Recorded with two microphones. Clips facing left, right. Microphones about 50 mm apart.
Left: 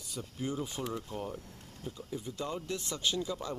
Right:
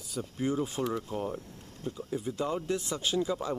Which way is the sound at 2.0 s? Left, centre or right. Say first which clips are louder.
Right 6 dB; right.